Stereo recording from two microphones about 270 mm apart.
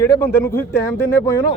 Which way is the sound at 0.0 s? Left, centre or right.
Centre.